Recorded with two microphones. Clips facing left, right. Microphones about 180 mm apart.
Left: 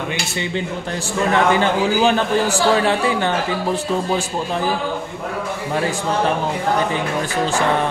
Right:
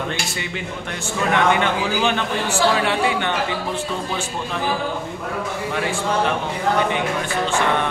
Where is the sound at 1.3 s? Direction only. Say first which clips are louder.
Left 2 dB; 35° left (ahead or behind).